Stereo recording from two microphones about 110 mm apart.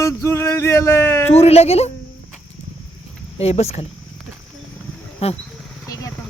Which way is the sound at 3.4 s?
70° left (ahead or behind).